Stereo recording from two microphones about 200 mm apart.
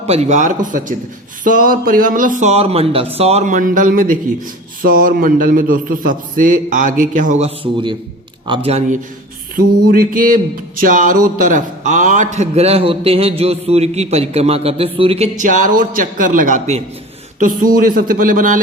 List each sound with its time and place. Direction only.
0.0 s a man's voice: 30° right (ahead or behind)
9.9 s a man's voice: 45° right (ahead or behind)